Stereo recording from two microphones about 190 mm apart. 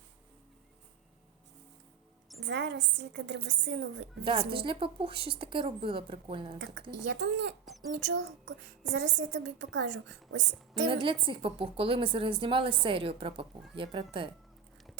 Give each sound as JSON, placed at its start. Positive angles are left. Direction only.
{"t": 2.4, "sound": "a woman's voice", "side_deg": -65}
{"t": 4.2, "sound": "a woman's voice", "side_deg": -25}
{"t": 7.1, "sound": "a woman's voice", "side_deg": -65}
{"t": 10.8, "sound": "a woman's voice", "side_deg": -25}